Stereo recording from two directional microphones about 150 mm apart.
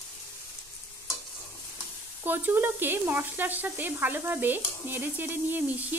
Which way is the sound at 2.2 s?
15° right (ahead or behind).